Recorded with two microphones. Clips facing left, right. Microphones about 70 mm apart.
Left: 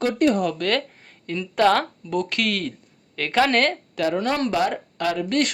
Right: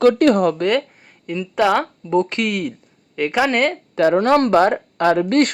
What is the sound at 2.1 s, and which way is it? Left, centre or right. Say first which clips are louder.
Speech: right 7 dB; right.